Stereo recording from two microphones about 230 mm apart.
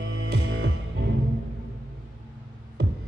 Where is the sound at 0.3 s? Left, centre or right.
Right.